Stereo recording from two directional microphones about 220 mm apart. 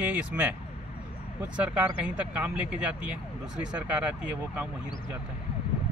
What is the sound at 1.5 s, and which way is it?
Speech, 5° right (ahead or behind).